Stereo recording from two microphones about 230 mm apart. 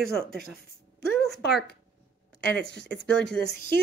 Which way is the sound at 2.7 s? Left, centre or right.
Left.